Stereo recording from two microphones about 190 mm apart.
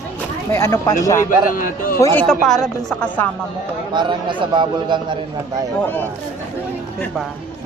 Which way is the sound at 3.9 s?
25° right (ahead or behind).